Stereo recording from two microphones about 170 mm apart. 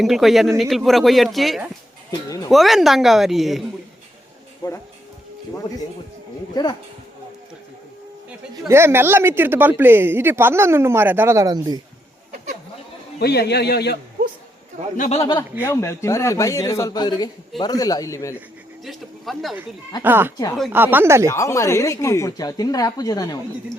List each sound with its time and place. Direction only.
0.0 s a woman's voice: centre (ahead or behind)
4.6 s speech: 25° left (ahead or behind)
6.5 s speech: 25° left (ahead or behind)
8.6 s speech: 15° right (ahead or behind)
13.1 s a man's voice: 75° left (ahead or behind)
14.9 s speech: 50° left (ahead or behind)
15.2 s speech: 30° left (ahead or behind)
15.6 s a man's voice: 15° left (ahead or behind)
18.9 s a woman's voice: centre (ahead or behind)
20.0 s speech: 10° right (ahead or behind)
21.2 s speech: 20° left (ahead or behind)